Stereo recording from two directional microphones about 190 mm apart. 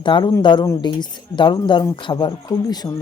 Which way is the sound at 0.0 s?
25° left (ahead or behind).